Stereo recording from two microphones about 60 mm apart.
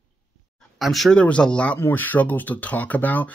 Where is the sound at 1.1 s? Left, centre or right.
Centre.